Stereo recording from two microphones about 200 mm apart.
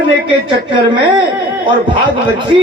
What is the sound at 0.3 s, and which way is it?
Speech, 25° right (ahead or behind).